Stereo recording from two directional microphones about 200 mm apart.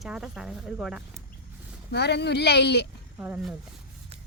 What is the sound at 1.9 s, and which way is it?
Speech, 55° left (ahead or behind).